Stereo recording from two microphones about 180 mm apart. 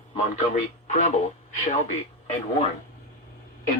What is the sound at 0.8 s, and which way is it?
Radio, 40° left (ahead or behind).